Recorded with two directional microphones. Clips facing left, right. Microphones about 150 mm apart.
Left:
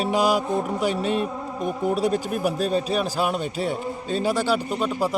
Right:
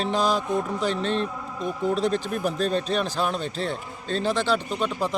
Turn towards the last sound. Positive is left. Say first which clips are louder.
# left 2 dB
turn(degrees=10)  # may be behind; listen again after turning